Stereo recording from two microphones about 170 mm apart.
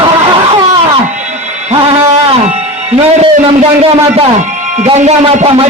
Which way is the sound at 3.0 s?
40° right (ahead or behind).